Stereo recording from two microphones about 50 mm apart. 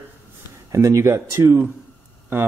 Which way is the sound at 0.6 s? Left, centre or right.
Right.